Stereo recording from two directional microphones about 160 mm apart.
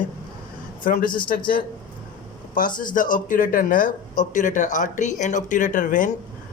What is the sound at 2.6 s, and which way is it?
A man's voice, 60° left (ahead or behind).